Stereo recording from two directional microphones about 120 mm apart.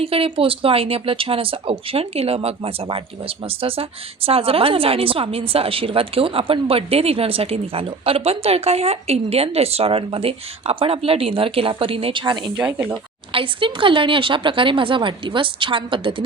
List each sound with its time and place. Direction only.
0.0 s speech: 50° right (ahead or behind)
12.5 s speech: 10° right (ahead or behind)
13.3 s speech: 45° right (ahead or behind)